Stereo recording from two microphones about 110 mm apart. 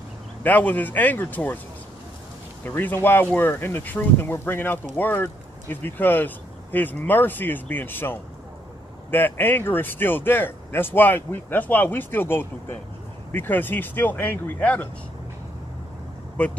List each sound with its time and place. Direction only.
0.4 s speech: 15° left (ahead or behind)
2.6 s speech: 20° left (ahead or behind)
16.4 s speech: 10° left (ahead or behind)